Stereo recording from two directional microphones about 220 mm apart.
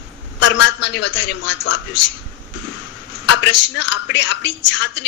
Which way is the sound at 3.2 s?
55° left (ahead or behind).